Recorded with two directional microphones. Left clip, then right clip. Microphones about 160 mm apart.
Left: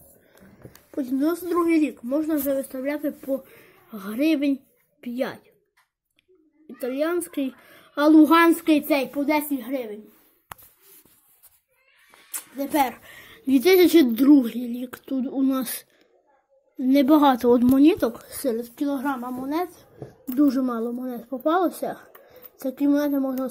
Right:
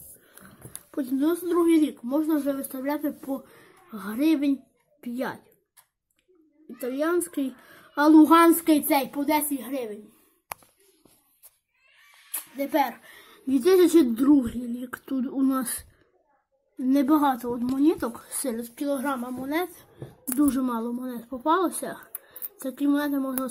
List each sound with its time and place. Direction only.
0.9 s speech: centre (ahead or behind)
6.8 s speech: centre (ahead or behind)
12.3 s a woman's voice: centre (ahead or behind)
15.0 s speech: 10° right (ahead or behind)
16.8 s speech: 5° left (ahead or behind)
17.1 s speech: 25° left (ahead or behind)
18.2 s a woman's voice: centre (ahead or behind)